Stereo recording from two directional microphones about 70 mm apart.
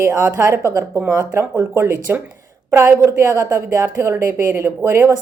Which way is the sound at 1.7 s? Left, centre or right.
Right.